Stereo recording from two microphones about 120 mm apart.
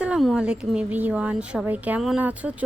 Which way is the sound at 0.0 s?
5° right (ahead or behind).